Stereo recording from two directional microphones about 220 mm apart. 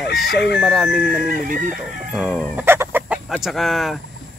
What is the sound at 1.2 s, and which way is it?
Speech, 40° right (ahead or behind).